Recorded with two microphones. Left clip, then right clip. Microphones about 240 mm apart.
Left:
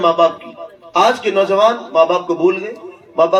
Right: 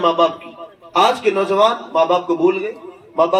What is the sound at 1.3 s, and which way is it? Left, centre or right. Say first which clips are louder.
A man's voice: left 2 dB; left.